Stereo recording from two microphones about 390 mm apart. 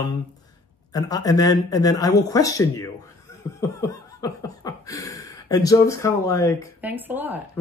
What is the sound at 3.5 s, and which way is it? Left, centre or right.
Laughter, centre.